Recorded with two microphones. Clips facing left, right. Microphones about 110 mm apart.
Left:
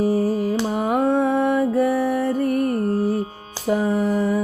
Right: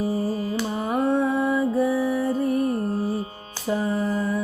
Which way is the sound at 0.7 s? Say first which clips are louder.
Left 4 dB; 65° left (ahead or behind).